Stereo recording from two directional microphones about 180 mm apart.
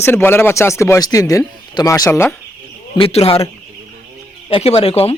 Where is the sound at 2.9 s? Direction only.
30° left (ahead or behind).